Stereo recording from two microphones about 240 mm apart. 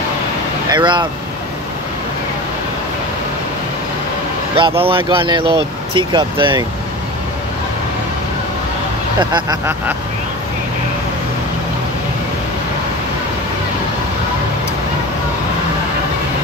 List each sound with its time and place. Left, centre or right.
0.7 s speech: centre
4.6 s speech: right
9.2 s speech: centre